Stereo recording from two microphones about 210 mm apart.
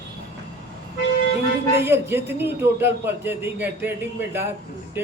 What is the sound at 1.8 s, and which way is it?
A man's voice, 10° right (ahead or behind).